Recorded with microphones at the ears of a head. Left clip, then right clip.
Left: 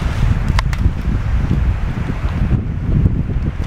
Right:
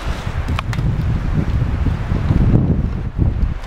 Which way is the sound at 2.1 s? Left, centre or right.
Right.